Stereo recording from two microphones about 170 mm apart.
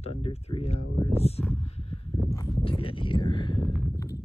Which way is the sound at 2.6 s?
35° left (ahead or behind).